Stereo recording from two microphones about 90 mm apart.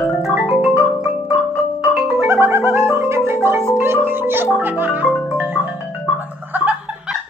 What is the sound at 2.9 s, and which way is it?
Marimba, 30° right (ahead or behind).